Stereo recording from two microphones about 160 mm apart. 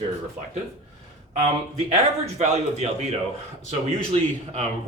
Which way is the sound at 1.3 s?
45° right (ahead or behind).